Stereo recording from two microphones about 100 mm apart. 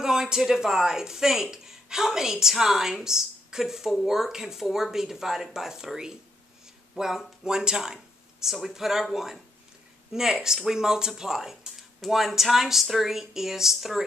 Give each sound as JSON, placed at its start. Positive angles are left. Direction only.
{"t": 0.0, "sound": "speech", "side_deg": -5}